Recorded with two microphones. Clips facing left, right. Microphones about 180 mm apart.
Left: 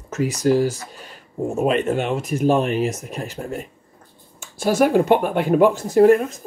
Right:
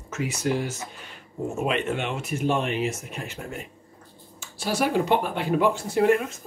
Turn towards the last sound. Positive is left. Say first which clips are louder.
# left 7 dB
turn(degrees=40)  # may be behind; listen again after turning